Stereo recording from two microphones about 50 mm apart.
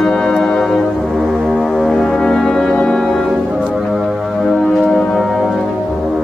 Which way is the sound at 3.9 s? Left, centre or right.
Centre.